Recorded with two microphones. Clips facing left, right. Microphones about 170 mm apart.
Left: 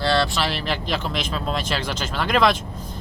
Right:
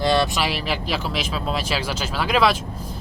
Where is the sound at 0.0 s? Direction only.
15° right (ahead or behind).